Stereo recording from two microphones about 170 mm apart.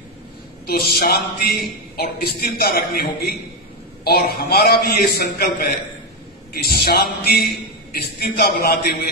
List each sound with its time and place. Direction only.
0.7 s a man's voice: 65° left (ahead or behind)